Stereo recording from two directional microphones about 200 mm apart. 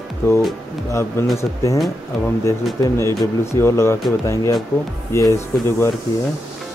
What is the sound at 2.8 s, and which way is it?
Speech, 15° left (ahead or behind).